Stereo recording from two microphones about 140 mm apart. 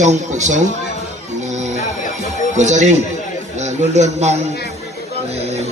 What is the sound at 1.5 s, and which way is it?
Music, 60° right (ahead or behind).